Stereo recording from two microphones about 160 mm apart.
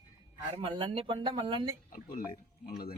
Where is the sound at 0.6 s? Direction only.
35° right (ahead or behind).